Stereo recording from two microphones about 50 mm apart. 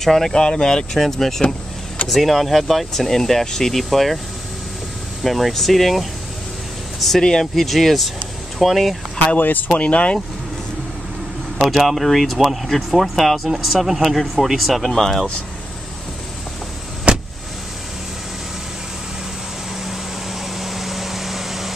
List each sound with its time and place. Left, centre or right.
0.0 s speech: centre
5.2 s speech: centre
7.2 s speech: centre
9.4 s speech: left
9.7 s speech: left
11.6 s speech: centre
17.1 s vehicle: centre
20.5 s a sound: centre